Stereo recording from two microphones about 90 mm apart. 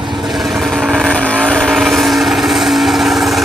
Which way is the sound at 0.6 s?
Centre (ahead or behind).